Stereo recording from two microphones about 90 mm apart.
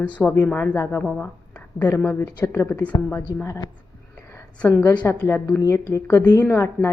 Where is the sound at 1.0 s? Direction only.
5° left (ahead or behind).